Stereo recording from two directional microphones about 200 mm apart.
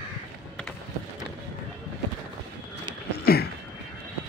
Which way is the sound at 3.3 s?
50° left (ahead or behind).